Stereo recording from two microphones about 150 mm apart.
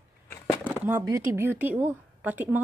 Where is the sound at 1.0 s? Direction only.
20° right (ahead or behind).